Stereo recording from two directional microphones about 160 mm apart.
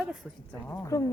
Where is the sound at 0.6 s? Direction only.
20° left (ahead or behind).